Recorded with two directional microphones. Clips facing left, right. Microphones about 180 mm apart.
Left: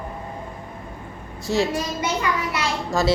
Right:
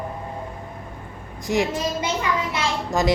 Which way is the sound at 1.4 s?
15° right (ahead or behind).